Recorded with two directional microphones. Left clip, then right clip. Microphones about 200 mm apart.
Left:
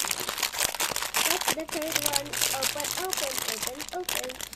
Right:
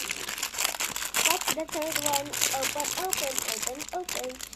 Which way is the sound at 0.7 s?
15° left (ahead or behind).